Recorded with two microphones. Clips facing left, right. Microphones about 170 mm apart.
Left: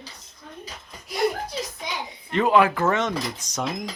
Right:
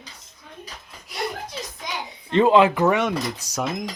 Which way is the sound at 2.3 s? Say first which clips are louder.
Right 3 dB; 25° right (ahead or behind).